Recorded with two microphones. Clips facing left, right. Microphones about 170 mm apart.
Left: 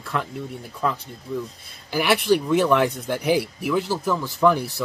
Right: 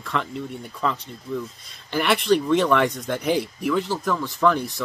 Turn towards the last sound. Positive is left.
turn(degrees=10)  # may be behind; listen again after turning